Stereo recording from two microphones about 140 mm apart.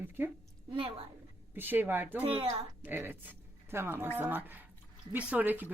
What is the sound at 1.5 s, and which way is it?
Speech, 15° right (ahead or behind).